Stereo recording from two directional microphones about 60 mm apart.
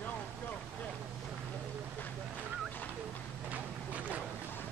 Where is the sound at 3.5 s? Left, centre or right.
Right.